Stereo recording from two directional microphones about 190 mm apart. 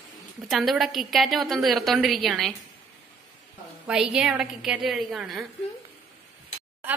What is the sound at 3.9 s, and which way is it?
A woman's voice, 5° right (ahead or behind).